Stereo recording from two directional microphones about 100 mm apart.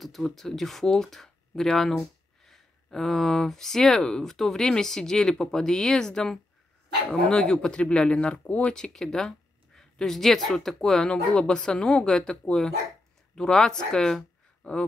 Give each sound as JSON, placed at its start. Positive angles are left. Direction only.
{"t": 0.0, "sound": "speech", "side_deg": 0}